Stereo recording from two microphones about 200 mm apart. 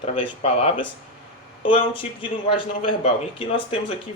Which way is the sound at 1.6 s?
25° left (ahead or behind).